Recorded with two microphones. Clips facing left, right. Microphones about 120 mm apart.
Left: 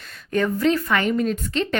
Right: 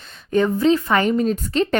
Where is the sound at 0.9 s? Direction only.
35° right (ahead or behind).